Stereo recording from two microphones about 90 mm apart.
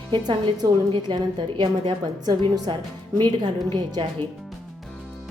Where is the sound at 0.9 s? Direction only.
50° right (ahead or behind).